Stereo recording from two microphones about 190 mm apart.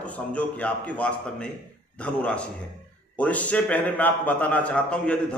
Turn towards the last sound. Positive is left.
turn(degrees=5)  # may be behind; listen again after turning